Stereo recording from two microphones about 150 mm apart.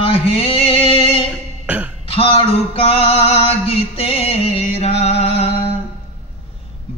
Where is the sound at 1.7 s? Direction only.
10° right (ahead or behind).